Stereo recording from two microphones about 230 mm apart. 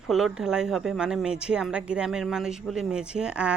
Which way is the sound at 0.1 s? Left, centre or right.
Centre.